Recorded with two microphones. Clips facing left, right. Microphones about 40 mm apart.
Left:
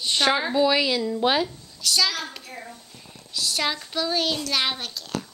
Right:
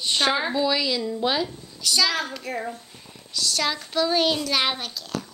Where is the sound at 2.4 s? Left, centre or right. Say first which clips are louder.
Right 9 dB; right.